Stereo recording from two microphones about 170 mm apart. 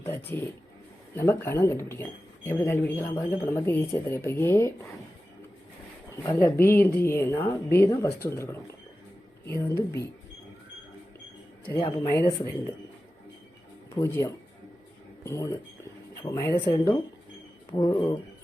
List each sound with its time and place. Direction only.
0.0 s speech: 15° left (ahead or behind)
6.6 s speech: 15° left (ahead or behind)
9.5 s speech: 15° left (ahead or behind)
11.8 s speech: 20° left (ahead or behind)
13.9 s speech: 15° left (ahead or behind)